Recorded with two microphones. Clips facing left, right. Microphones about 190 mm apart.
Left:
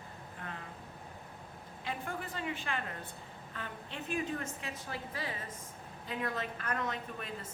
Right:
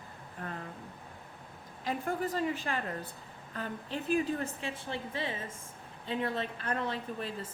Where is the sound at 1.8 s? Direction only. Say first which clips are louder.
Right 7 dB; 40° right (ahead or behind).